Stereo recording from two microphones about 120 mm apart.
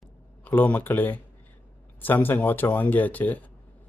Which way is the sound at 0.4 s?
15° left (ahead or behind).